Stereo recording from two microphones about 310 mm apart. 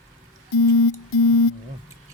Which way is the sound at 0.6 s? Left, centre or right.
Left.